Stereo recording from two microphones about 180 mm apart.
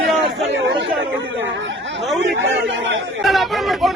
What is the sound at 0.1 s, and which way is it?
Chatter, centre (ahead or behind).